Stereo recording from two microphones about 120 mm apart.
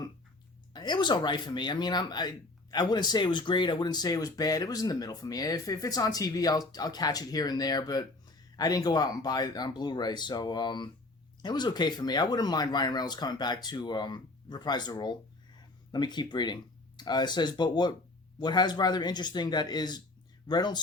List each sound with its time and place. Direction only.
0.7 s speech: 35° left (ahead or behind)